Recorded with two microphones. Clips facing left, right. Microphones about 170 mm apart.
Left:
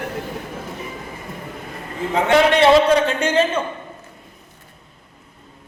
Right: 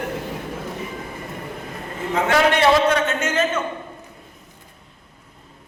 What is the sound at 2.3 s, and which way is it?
A man's voice, 25° left (ahead or behind).